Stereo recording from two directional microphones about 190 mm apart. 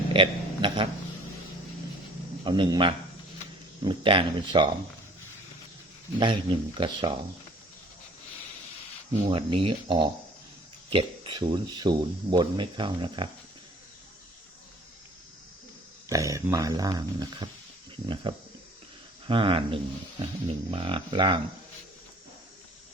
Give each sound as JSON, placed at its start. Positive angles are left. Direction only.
{"t": 0.1, "sound": "a sound", "side_deg": -25}
{"t": 2.4, "sound": "speech", "side_deg": -25}
{"t": 6.1, "sound": "speech", "side_deg": -25}
{"t": 9.1, "sound": "speech", "side_deg": -30}
{"t": 16.0, "sound": "speech", "side_deg": -15}